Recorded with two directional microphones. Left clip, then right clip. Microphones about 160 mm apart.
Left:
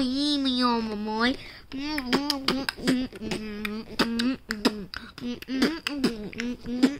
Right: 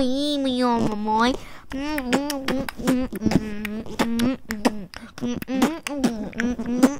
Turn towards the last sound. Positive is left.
turn(degrees=-55)  # may be behind; listen again after turning